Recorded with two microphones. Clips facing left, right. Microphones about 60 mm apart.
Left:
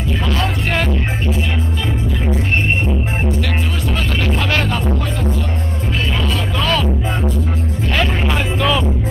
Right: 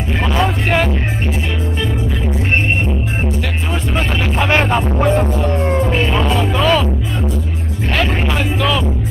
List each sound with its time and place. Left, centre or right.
0.3 s speech: centre
4.4 s speech: right
6.1 s music: right
6.6 s speech: centre
8.0 s speech: centre